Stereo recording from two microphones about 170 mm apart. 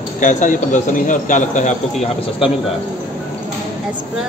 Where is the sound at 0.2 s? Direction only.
50° left (ahead or behind).